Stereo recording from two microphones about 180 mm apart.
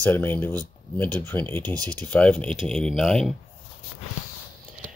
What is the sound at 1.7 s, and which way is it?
Speech, 20° right (ahead or behind).